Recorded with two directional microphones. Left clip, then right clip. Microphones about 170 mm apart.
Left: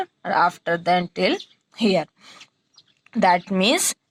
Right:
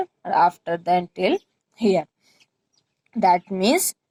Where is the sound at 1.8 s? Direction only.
30° left (ahead or behind).